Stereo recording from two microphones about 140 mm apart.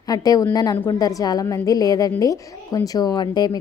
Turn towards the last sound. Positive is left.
turn(degrees=30)  # may be behind; listen again after turning